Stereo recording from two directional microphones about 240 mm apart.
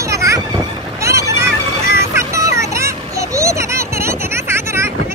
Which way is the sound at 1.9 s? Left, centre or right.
Centre.